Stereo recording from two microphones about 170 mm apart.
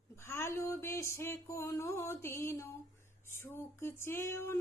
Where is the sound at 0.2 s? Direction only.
15° left (ahead or behind).